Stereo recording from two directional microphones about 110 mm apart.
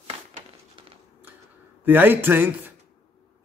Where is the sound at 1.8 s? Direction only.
20° right (ahead or behind).